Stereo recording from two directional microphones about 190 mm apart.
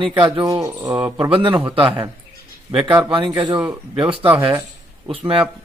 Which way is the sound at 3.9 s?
25° right (ahead or behind).